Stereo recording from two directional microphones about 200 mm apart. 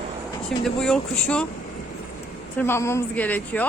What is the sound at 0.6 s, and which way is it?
Speech, 5° left (ahead or behind).